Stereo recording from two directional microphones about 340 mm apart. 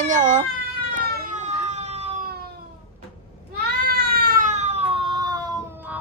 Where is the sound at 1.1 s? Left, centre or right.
Right.